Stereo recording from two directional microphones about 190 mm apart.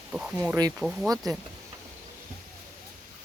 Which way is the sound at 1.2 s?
20° right (ahead or behind).